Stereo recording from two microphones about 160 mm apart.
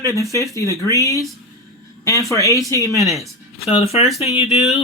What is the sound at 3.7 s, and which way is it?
Speech, 40° left (ahead or behind).